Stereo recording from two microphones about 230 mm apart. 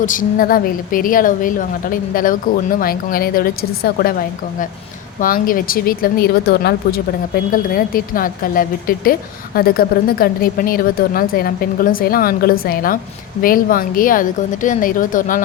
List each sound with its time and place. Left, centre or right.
0.0 s speech: left
5.2 s speech: left